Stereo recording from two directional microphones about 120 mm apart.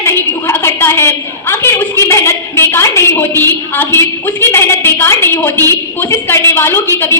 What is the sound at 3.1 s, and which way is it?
A woman's voice, 15° left (ahead or behind).